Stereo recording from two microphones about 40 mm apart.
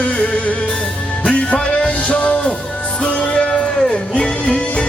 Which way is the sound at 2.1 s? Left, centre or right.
Left.